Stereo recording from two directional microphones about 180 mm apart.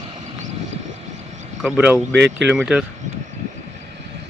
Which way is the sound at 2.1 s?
70° right (ahead or behind).